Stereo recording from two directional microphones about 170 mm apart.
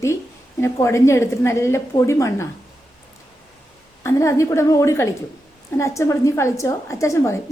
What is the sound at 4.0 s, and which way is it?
A woman's voice, 15° left (ahead or behind).